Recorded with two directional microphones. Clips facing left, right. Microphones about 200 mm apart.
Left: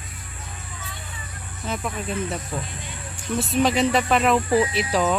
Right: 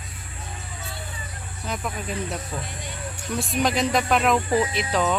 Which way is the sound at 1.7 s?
Centre (ahead or behind).